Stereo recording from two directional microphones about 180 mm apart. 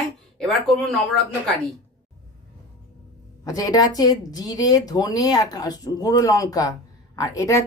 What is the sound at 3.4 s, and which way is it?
Speech, 20° left (ahead or behind).